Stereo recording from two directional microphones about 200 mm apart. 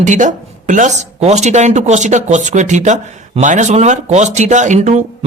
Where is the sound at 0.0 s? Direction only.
40° right (ahead or behind).